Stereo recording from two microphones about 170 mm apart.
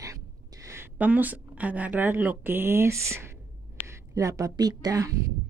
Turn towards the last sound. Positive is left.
turn(degrees=-20)  # may be behind; listen again after turning